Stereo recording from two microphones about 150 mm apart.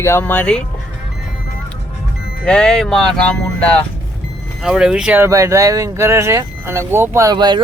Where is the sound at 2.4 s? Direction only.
5° left (ahead or behind).